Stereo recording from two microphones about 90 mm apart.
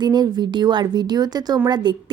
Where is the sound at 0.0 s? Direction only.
50° right (ahead or behind).